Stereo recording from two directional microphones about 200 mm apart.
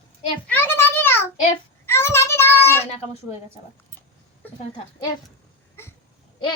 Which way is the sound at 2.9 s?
30° left (ahead or behind).